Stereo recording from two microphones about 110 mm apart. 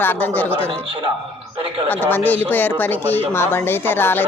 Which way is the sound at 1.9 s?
15° left (ahead or behind).